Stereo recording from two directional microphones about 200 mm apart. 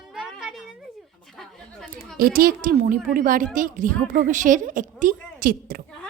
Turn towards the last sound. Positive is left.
turn(degrees=-45)  # may be behind; listen again after turning